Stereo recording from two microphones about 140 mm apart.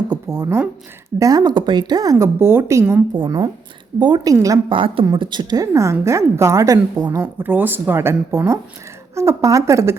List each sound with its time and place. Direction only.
0.1 s a sound: 25° right (ahead or behind)
1.2 s a woman's voice: 30° right (ahead or behind)
3.2 s a woman's voice: 30° right (ahead or behind)
4.7 s a woman's voice: 40° right (ahead or behind)
7.2 s a woman's voice: 15° right (ahead or behind)